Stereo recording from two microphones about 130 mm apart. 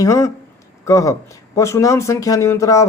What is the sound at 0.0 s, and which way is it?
Speech, 25° left (ahead or behind).